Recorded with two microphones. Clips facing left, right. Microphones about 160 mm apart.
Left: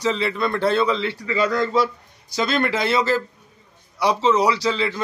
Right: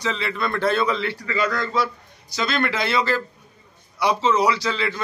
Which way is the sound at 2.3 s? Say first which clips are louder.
Left 2 dB; 40° left (ahead or behind).